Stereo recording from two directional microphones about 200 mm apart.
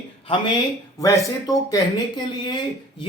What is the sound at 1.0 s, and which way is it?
Speech, 15° left (ahead or behind).